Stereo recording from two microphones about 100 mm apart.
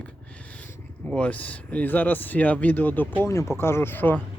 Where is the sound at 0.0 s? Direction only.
15° left (ahead or behind).